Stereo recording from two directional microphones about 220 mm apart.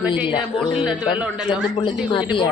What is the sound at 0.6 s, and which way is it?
Speech, 5° right (ahead or behind).